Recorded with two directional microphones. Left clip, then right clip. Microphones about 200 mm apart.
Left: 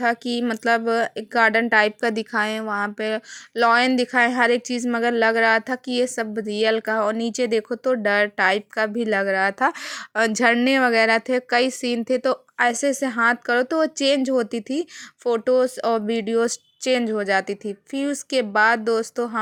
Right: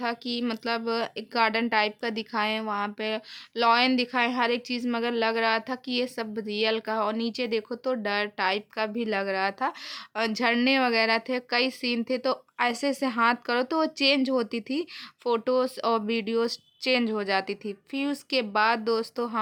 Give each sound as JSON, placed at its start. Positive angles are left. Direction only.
{"t": 0.0, "sound": "a woman's voice", "side_deg": 25}